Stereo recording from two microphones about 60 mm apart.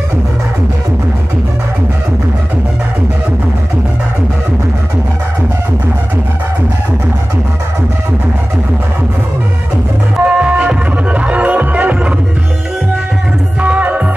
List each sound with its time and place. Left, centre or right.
10.2 s music: centre
13.6 s music: right